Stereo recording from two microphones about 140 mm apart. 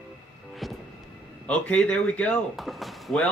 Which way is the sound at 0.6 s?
Centre (ahead or behind).